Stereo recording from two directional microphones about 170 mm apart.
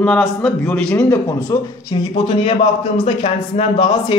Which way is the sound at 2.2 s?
35° left (ahead or behind).